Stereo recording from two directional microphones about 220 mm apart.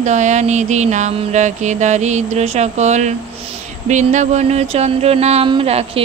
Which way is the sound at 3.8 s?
35° right (ahead or behind).